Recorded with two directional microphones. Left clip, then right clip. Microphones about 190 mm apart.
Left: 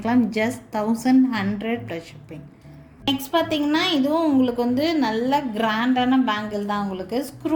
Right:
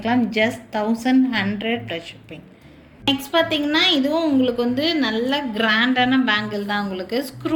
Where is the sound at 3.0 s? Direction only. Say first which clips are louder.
Right 3 dB; 50° left (ahead or behind).